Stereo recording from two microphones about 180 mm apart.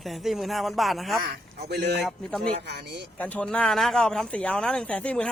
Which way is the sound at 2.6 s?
65° right (ahead or behind).